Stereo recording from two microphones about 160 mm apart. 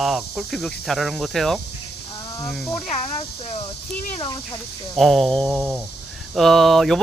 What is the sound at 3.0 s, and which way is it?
Speech, 40° left (ahead or behind).